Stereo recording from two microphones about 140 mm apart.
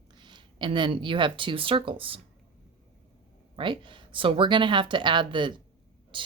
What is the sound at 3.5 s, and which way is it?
Speech, 35° right (ahead or behind).